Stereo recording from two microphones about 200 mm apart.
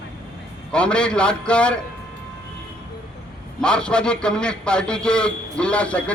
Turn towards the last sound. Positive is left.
turn(degrees=5)  # may be behind; listen again after turning